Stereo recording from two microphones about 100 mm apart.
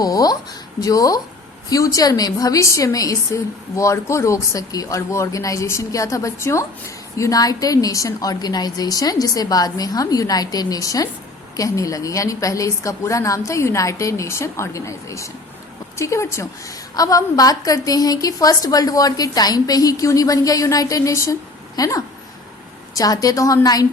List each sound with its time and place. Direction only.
0.0 s a woman's voice: 40° left (ahead or behind)